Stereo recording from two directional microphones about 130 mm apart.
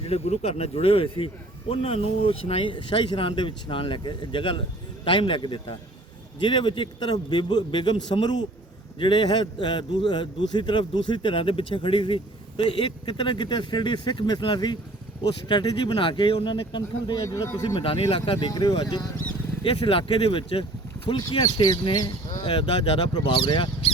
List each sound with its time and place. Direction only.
0.0 s a man's voice: 50° left (ahead or behind)
17.2 s a man's voice: 25° left (ahead or behind)
17.7 s speech: 45° left (ahead or behind)
18.3 s a man's voice: 30° left (ahead or behind)
19.6 s speech: 45° left (ahead or behind)
21.2 s a man's voice: 30° left (ahead or behind)